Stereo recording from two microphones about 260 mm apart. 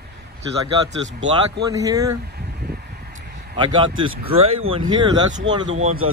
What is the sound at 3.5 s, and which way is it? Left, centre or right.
Speech, centre.